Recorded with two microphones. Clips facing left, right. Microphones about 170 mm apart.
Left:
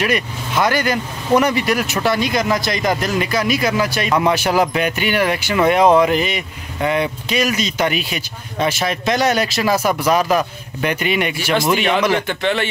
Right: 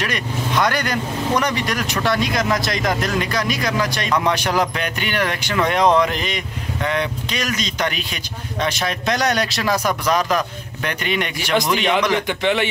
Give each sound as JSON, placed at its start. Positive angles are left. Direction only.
{"t": 0.0, "sound": "speech", "side_deg": 5}
{"t": 12.3, "sound": "a man's voice", "side_deg": -15}